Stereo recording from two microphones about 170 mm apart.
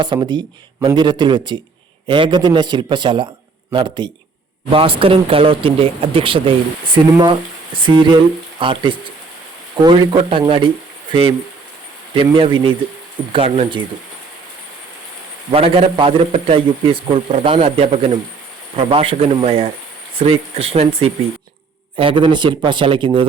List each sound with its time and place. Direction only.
0.0 s a man's voice: 25° right (ahead or behind)
15.5 s a man's voice: 35° right (ahead or behind)